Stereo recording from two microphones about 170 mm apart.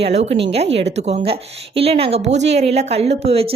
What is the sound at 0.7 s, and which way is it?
Speech, 90° right.